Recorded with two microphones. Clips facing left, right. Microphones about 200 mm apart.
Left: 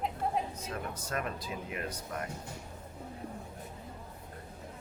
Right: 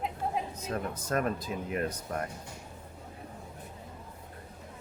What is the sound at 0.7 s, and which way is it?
Speech, 45° right (ahead or behind).